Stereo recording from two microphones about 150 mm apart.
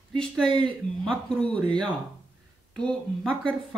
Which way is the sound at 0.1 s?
5° left (ahead or behind).